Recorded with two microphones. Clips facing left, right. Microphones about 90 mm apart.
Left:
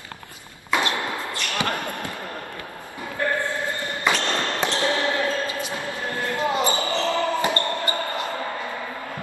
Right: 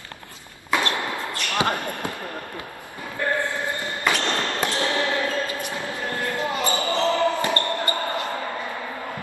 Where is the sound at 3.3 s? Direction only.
20° right (ahead or behind).